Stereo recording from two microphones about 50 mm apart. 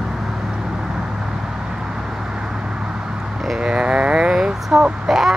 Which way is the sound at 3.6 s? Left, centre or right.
Centre.